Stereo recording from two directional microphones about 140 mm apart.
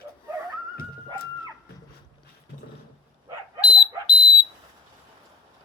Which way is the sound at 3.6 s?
35° left (ahead or behind).